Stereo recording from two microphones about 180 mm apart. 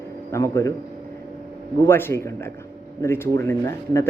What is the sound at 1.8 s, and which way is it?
Speech, 15° left (ahead or behind).